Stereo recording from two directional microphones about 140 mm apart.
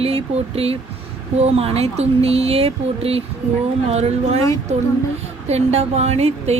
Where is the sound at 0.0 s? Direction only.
45° right (ahead or behind).